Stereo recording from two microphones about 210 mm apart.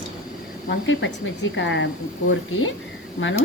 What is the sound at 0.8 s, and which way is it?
Speech, 65° left (ahead or behind).